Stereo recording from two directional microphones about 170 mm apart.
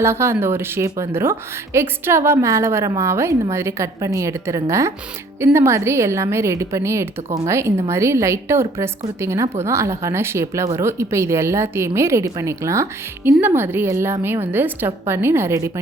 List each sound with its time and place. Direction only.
0.0 s a woman's voice: 15° right (ahead or behind)